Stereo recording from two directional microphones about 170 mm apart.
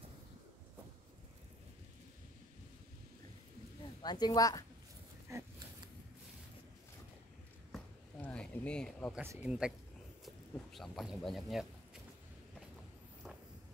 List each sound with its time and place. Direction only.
4.0 s speech: 25° left (ahead or behind)
7.7 s a sound: 5° left (ahead or behind)
9.1 s speech: 10° right (ahead or behind)